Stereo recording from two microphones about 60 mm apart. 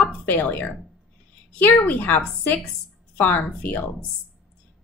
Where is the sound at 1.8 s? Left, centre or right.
Left.